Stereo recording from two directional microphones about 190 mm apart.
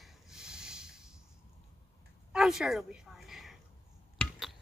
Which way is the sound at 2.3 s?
5° right (ahead or behind).